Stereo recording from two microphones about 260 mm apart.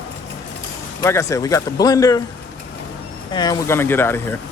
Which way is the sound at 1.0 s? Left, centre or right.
Centre.